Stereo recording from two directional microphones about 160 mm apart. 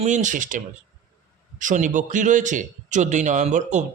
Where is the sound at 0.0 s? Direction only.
50° right (ahead or behind).